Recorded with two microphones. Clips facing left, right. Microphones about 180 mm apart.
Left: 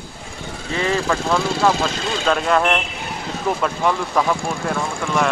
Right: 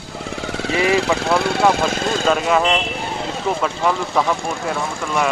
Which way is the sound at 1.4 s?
65° right (ahead or behind).